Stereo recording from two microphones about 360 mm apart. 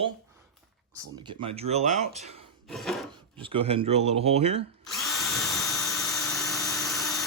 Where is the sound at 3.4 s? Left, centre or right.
Centre.